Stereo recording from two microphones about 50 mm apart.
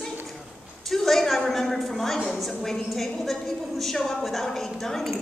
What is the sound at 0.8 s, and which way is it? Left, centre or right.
A woman's voice, centre.